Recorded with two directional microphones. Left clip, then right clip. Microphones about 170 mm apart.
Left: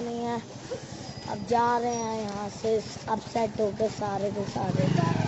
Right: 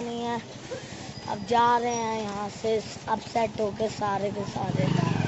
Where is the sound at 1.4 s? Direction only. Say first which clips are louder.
Right 2 dB; 10° left (ahead or behind).